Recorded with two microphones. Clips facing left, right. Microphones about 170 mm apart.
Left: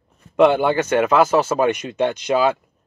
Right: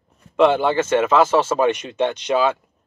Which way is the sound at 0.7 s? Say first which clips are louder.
Even; 25° right (ahead or behind).